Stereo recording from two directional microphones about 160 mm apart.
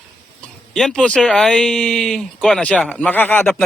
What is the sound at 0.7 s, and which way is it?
A man's voice, centre (ahead or behind).